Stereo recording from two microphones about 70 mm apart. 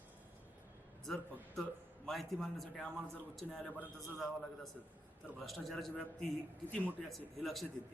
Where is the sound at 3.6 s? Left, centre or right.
Left.